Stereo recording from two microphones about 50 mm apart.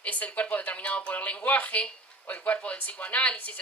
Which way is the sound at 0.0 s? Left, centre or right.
Left.